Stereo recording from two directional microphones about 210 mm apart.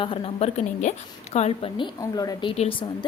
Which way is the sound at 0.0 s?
25° left (ahead or behind).